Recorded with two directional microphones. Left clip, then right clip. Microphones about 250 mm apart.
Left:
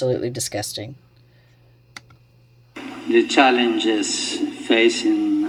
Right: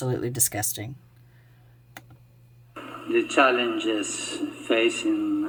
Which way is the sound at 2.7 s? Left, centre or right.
Left.